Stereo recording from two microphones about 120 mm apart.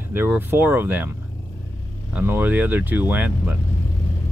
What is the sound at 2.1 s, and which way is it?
Speech, 15° right (ahead or behind).